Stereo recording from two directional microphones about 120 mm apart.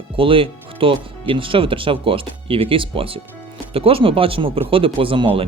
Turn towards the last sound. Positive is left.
turn(degrees=-50)  # may be behind; listen again after turning